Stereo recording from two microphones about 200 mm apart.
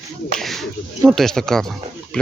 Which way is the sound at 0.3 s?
Centre (ahead or behind).